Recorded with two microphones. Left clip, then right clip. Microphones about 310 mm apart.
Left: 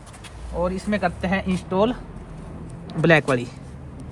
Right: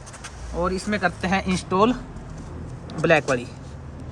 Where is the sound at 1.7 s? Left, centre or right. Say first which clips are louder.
Right 1 dB; centre.